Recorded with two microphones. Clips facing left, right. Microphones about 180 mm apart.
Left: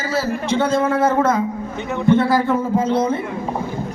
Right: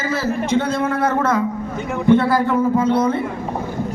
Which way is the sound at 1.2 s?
65° right (ahead or behind).